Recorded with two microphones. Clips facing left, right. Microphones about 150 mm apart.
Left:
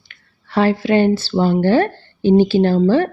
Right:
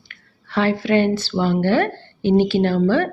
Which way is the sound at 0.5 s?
30° left (ahead or behind).